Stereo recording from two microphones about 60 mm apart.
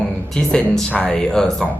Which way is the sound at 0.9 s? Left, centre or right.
Left.